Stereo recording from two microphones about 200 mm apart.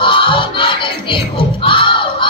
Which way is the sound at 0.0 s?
25° left (ahead or behind).